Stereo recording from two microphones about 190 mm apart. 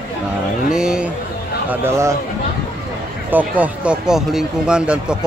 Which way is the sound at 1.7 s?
15° right (ahead or behind).